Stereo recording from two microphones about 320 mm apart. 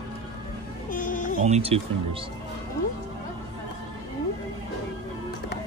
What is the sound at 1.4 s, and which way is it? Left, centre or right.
Speech, centre.